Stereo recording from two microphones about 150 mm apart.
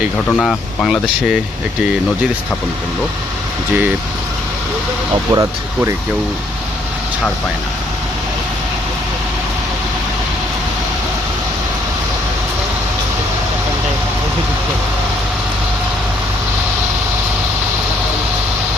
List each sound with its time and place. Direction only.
0.3 s speech: 5° left (ahead or behind)
5.3 s speech: 20° right (ahead or behind)